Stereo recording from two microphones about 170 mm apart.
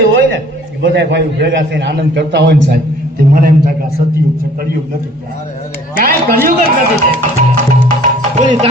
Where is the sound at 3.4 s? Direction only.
55° right (ahead or behind).